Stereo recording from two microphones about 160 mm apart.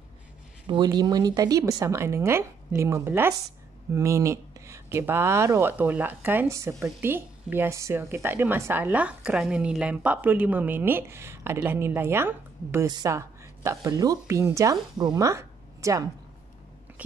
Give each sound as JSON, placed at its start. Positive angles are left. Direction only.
{"t": 0.7, "sound": "speech", "side_deg": -25}